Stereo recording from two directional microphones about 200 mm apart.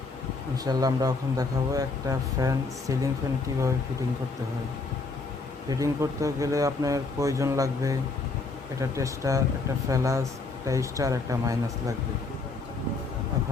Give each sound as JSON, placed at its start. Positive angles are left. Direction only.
{"t": 0.5, "sound": "speech", "side_deg": -20}
{"t": 5.7, "sound": "speech", "side_deg": -15}